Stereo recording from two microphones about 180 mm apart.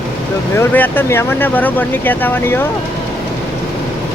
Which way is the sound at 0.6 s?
10° left (ahead or behind).